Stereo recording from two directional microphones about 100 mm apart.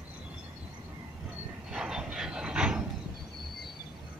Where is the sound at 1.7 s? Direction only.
5° right (ahead or behind).